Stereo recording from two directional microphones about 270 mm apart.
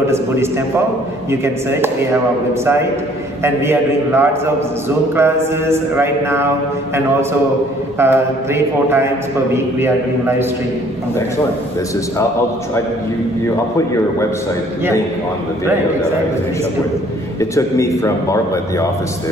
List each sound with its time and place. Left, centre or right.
1.3 s a man's voice: centre
8.0 s a man's voice: centre
17.4 s a man's voice: centre